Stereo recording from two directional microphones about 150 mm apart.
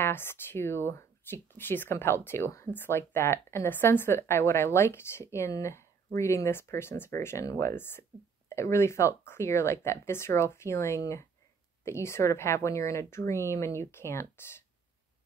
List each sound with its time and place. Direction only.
0.0 s speech: 15° left (ahead or behind)